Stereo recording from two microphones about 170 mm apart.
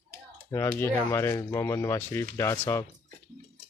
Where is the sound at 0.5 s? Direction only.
15° left (ahead or behind).